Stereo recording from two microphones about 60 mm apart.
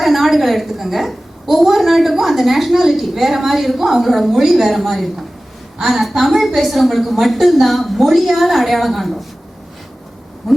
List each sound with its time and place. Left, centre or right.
0.0 s a woman's voice: centre
10.4 s owl: centre